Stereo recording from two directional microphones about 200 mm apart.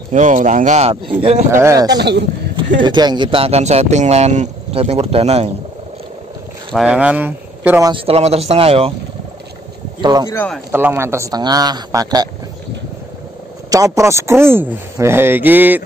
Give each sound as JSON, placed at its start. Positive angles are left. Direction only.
{"t": 0.1, "sound": "speech", "side_deg": -40}
{"t": 1.5, "sound": "a man's voice", "side_deg": -15}
{"t": 2.0, "sound": "speech", "side_deg": -60}
{"t": 2.8, "sound": "speech", "side_deg": -20}
{"t": 6.7, "sound": "speech", "side_deg": -5}
{"t": 7.9, "sound": "speech", "side_deg": -30}
{"t": 10.0, "sound": "speech", "side_deg": -20}
{"t": 10.3, "sound": "speech", "side_deg": 5}
{"t": 10.7, "sound": "a man's voice", "side_deg": -10}
{"t": 13.7, "sound": "a man's voice", "side_deg": -15}